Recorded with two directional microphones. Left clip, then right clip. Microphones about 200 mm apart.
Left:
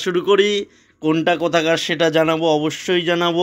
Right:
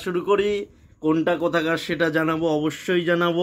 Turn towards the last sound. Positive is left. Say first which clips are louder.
# left 3 dB
turn(degrees=10)  # may be behind; listen again after turning